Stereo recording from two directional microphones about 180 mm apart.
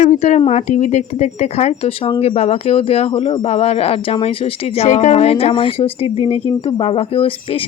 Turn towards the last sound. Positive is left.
turn(degrees=30)  # may be behind; listen again after turning